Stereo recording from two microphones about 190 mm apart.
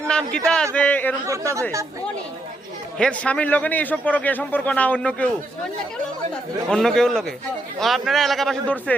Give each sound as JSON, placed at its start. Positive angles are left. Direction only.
{"t": 0.3, "sound": "a man's voice", "side_deg": 5}
{"t": 1.3, "sound": "speech", "side_deg": -15}
{"t": 3.0, "sound": "a man's voice", "side_deg": 5}
{"t": 6.7, "sound": "speech", "side_deg": 5}